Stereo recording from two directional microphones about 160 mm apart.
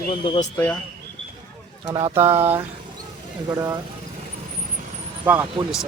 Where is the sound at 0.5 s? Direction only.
10° left (ahead or behind).